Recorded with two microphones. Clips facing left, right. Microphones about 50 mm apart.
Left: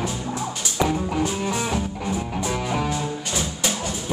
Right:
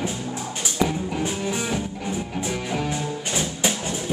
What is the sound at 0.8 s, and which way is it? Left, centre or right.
Music, centre.